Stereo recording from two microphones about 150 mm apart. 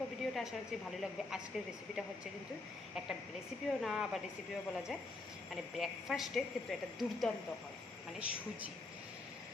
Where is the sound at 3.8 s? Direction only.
Centre (ahead or behind).